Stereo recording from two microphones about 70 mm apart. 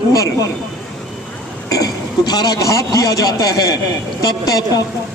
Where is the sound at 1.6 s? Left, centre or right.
Left.